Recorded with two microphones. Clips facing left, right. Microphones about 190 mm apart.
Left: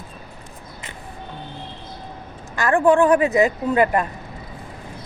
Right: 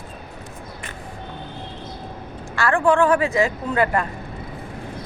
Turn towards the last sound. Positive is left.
turn(degrees=20)  # may be behind; listen again after turning